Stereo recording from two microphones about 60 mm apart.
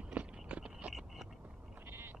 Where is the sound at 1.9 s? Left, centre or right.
Right.